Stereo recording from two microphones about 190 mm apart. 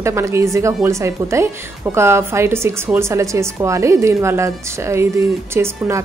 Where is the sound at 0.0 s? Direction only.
15° right (ahead or behind).